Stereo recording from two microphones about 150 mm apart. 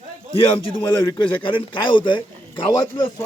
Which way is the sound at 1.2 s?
35° left (ahead or behind).